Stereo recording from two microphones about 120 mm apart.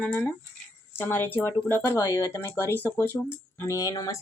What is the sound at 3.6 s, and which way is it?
Speech, 30° left (ahead or behind).